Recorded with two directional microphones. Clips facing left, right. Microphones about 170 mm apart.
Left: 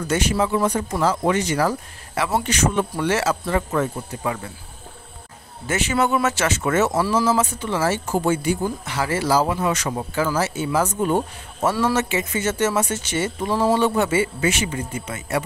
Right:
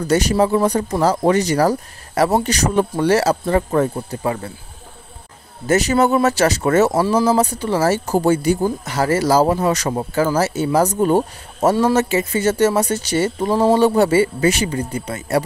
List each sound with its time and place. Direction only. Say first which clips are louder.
0.0 s speech: right 5 dB; 35° right (ahead or behind)
5.7 s speech: right 6 dB; 40° right (ahead or behind)